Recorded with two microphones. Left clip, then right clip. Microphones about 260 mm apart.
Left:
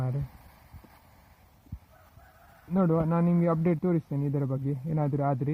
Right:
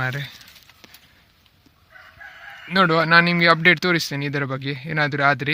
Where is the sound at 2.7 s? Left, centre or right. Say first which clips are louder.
Right 12 dB; right.